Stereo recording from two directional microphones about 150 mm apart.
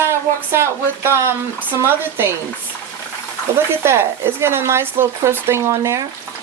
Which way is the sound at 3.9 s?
15° right (ahead or behind).